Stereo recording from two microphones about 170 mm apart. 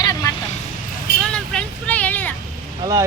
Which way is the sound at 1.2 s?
5° left (ahead or behind).